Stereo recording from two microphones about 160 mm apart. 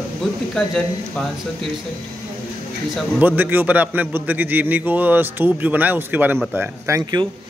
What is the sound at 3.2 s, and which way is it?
A man's voice, 10° right (ahead or behind).